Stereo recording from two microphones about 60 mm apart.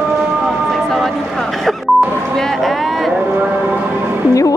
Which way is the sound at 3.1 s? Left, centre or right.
Right.